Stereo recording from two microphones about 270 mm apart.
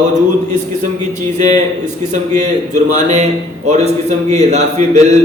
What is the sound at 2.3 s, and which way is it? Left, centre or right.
Speech, right.